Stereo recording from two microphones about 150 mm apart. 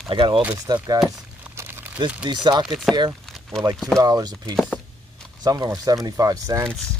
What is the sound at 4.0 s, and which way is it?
Speech, 25° right (ahead or behind).